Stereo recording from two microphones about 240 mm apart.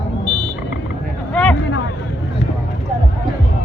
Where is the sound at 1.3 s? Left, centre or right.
Centre.